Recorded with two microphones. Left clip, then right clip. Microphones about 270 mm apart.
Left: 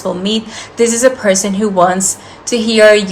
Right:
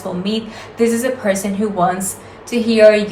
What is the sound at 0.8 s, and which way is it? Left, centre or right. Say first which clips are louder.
Speech: left 6 dB; left.